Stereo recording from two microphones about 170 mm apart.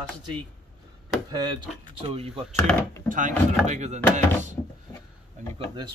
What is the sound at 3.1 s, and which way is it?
Speech, 50° right (ahead or behind).